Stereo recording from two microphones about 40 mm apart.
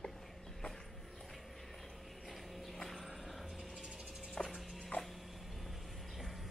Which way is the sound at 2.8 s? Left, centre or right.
Centre.